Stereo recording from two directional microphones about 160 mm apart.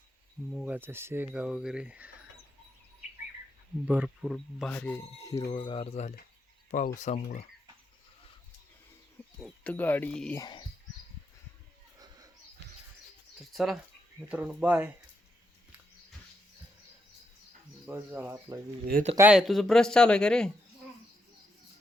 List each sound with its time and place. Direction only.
0.5 s speech: 10° right (ahead or behind)
3.8 s speech: 5° right (ahead or behind); by 5.5 s 15° left (ahead or behind)
5.5 s speech: 30° left (ahead or behind)
6.7 s speech: 55° left (ahead or behind)
9.4 s speech: 10° left (ahead or behind)
10.3 s speech: 25° left (ahead or behind)
11.9 s a sound: 25° right (ahead or behind)
13.4 s speech: centre (ahead or behind)
17.8 s speech: 10° right (ahead or behind)
18.9 s speech: 65° right (ahead or behind)
19.3 s speech: centre (ahead or behind)